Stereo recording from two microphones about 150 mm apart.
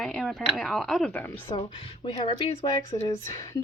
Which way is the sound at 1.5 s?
35° left (ahead or behind).